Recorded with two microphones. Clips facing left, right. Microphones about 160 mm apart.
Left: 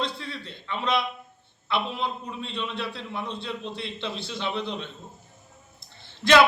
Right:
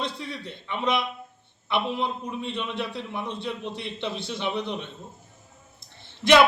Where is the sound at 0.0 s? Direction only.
15° right (ahead or behind).